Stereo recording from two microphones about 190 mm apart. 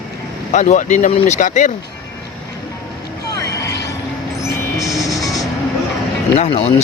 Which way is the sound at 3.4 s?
20° left (ahead or behind).